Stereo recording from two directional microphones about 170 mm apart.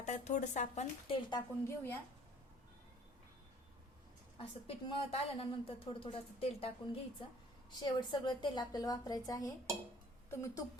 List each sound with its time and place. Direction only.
0.0 s a woman's voice: 45° left (ahead or behind)
1.4 s a woman's voice: 15° left (ahead or behind)
4.4 s a woman's voice: 30° left (ahead or behind); by 10.6 s 15° left (ahead or behind)